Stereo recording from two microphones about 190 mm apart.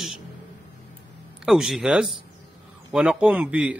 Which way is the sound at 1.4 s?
Centre (ahead or behind).